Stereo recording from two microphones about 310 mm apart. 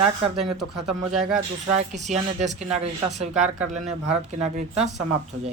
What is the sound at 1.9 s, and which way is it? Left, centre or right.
Speech, right.